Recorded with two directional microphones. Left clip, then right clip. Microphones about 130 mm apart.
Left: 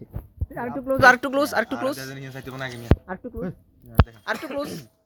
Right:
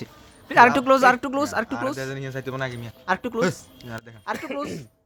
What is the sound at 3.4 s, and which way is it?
Speech, 45° right (ahead or behind).